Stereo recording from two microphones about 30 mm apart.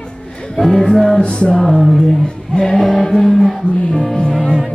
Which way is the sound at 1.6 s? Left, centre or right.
Centre.